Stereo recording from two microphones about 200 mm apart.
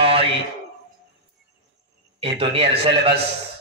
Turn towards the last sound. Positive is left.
turn(degrees=-30)  # may be behind; listen again after turning